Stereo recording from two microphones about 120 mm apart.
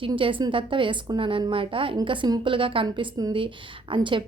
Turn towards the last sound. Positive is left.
turn(degrees=-45)  # may be behind; listen again after turning